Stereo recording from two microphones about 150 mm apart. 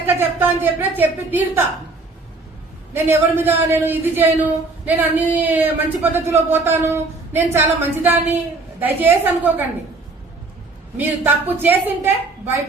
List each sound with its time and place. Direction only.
0.0 s a woman's voice: 15° right (ahead or behind)
2.9 s a woman's voice: 15° right (ahead or behind)
10.9 s a woman's voice: 10° right (ahead or behind)